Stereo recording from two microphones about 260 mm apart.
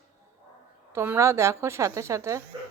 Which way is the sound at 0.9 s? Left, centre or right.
Centre.